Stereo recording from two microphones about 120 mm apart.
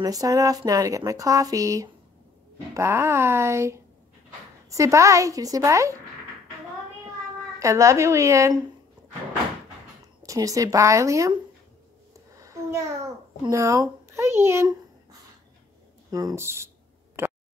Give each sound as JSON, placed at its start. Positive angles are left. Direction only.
{"t": 0.0, "sound": "speech", "side_deg": -30}
{"t": 7.5, "sound": "speech", "side_deg": -25}
{"t": 10.2, "sound": "speech", "side_deg": -30}
{"t": 12.4, "sound": "a sound", "side_deg": -25}
{"t": 13.5, "sound": "speech", "side_deg": -25}
{"t": 16.1, "sound": "a sound", "side_deg": -30}